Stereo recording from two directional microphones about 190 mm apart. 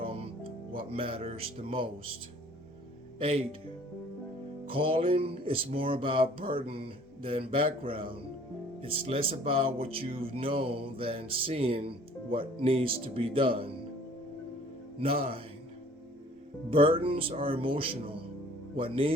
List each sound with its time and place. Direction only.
0.8 s speech: 30° right (ahead or behind)
3.2 s speech: 30° right (ahead or behind)
4.6 s speech: 30° right (ahead or behind)
15.0 s speech: 30° right (ahead or behind)
16.6 s speech: 30° right (ahead or behind)